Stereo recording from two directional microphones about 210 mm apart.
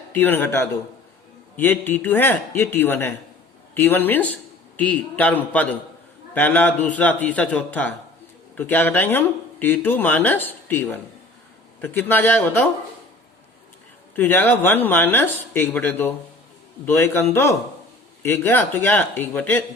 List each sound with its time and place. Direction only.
0.1 s speech: 10° left (ahead or behind)
14.2 s speech: 10° left (ahead or behind)